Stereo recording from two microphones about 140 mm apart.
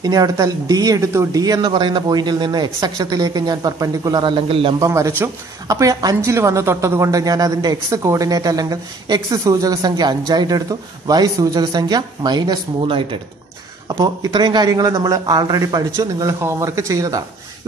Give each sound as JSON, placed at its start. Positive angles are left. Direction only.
{"t": 0.0, "sound": "a woman's voice", "side_deg": -25}
{"t": 4.7, "sound": "a woman's voice", "side_deg": -25}